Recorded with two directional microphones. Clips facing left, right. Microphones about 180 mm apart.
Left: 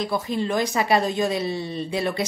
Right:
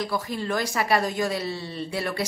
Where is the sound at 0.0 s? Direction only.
20° left (ahead or behind).